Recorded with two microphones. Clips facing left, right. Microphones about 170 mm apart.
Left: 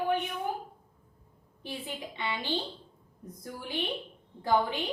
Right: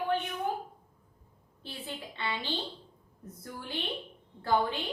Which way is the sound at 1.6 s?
15° left (ahead or behind).